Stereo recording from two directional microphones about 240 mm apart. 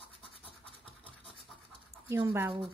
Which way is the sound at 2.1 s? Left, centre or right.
Centre.